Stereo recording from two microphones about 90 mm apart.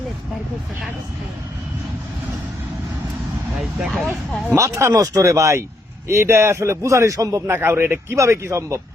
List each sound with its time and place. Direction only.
3.9 s speech: 5° left (ahead or behind)
4.5 s a man's voice: 35° right (ahead or behind)
7.4 s a man's voice: 25° right (ahead or behind)